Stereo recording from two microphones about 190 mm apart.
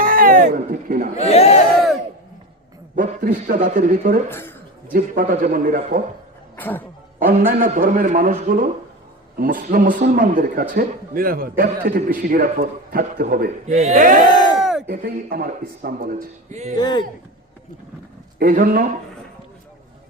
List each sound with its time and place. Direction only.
0.0 s a sound: 45° right (ahead or behind)
1.3 s speech: 35° left (ahead or behind)
2.9 s a man's voice: 45° right (ahead or behind)
4.3 s a man's voice: 10° left (ahead or behind)
4.9 s a man's voice: 45° right (ahead or behind)
6.6 s a man's voice: 10° left (ahead or behind)
7.6 s a man's voice: 45° right (ahead or behind)
14.3 s a sound: 25° left (ahead or behind)
14.6 s a sound: centre (ahead or behind)
14.8 s a man's voice: 55° right (ahead or behind); by 16.7 s 35° right (ahead or behind)
16.7 s speech: 20° left (ahead or behind)
18.3 s a man's voice: 50° right (ahead or behind)